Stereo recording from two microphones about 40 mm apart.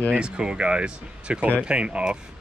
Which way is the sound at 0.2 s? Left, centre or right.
Right.